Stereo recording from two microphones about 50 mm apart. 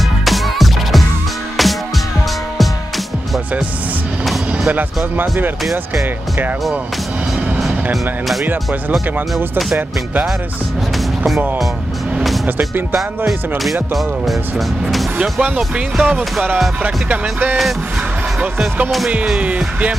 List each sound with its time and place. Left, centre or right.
0.2 s music: centre
4.6 s speech: right
7.6 s speech: centre
12.4 s speech: right
16.0 s music: right
16.8 s speech: right
19.4 s music: right